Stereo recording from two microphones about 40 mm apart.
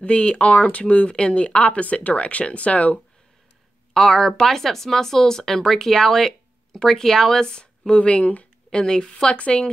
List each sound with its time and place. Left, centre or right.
0.0 s speech: left
3.9 s speech: centre
7.4 s speech: left
8.7 s speech: centre